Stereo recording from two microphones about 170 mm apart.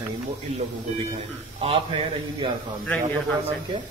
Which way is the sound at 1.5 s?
35° right (ahead or behind).